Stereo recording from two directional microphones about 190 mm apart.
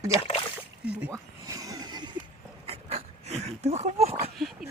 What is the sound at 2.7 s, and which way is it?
Dog, 35° right (ahead or behind).